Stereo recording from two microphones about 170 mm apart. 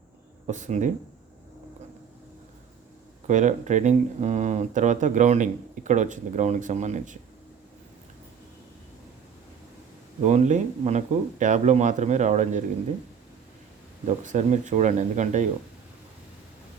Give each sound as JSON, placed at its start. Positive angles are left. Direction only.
{"t": 0.4, "sound": "speech", "side_deg": -45}
{"t": 3.2, "sound": "speech", "side_deg": -45}
{"t": 10.2, "sound": "speech", "side_deg": -45}
{"t": 14.3, "sound": "speech", "side_deg": -45}